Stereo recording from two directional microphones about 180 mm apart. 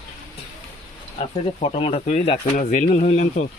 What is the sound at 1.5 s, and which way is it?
Speech, 35° left (ahead or behind).